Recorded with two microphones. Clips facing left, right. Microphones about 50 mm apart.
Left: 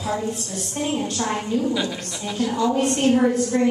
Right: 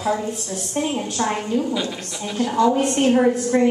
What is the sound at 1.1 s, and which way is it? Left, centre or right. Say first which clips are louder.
A woman's voice: right 2 dB; centre.